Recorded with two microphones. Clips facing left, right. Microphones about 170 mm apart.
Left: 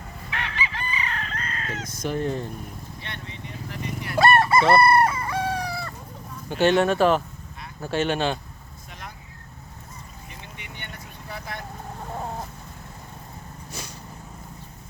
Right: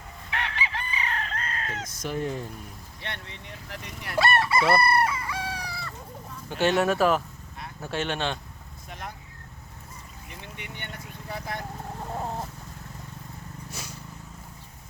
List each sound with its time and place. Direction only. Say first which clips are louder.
0.3 s chicken: even; 55° right (ahead or behind)
1.8 s speech: left 4 dB; centre (ahead or behind)
3.0 s speech: right 2 dB; 70° right (ahead or behind)
4.2 s chicken: left 5 dB; 50° left (ahead or behind)
6.5 s speech: left 4 dB; centre (ahead or behind)
8.9 s vehicle: right 3 dB; 50° right (ahead or behind)
11.5 s vehicle: right 2 dB; 40° right (ahead or behind)
13.7 s a sound: left 3 dB; 5° right (ahead or behind)